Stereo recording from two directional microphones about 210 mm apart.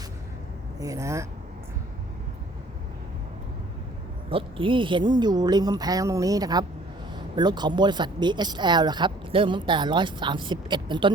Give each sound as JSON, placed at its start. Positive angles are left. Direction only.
{"t": 0.8, "sound": "speech", "side_deg": -15}
{"t": 4.3, "sound": "speech", "side_deg": -25}